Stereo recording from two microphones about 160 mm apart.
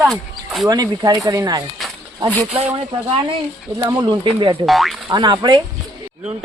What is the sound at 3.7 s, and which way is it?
Speech, 20° right (ahead or behind).